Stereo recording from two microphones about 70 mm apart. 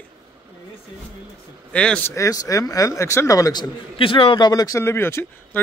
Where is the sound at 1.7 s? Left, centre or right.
Centre.